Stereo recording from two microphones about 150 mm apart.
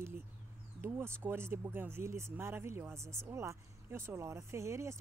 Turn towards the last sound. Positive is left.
turn(degrees=-20)  # may be behind; listen again after turning